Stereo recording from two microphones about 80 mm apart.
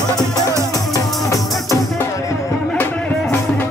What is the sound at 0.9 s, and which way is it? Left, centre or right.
Music, left.